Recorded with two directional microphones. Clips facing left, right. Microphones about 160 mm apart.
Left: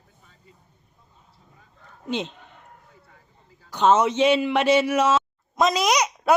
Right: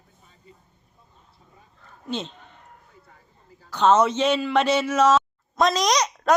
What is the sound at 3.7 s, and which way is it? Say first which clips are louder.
Speech: even; 10° left (ahead or behind).